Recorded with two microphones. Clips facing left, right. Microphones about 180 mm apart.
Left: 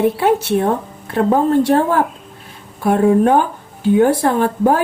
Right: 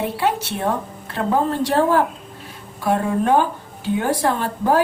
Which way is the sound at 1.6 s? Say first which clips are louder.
Left 3 dB; 50° left (ahead or behind).